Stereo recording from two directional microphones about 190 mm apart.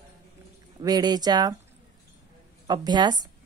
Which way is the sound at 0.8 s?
20° right (ahead or behind).